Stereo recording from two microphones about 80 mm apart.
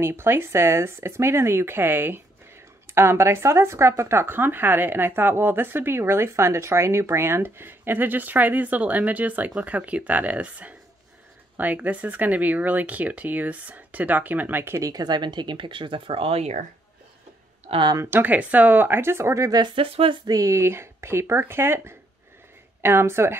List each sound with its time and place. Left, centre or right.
0.0 s speech: right
14.8 s speech: right
18.1 s speech: right
19.5 s speech: right
20.2 s speech: right